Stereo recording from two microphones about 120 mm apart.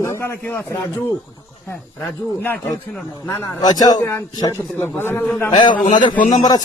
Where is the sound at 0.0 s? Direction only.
20° left (ahead or behind).